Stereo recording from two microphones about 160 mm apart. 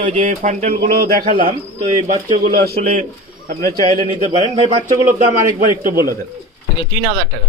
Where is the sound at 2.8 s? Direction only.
50° right (ahead or behind).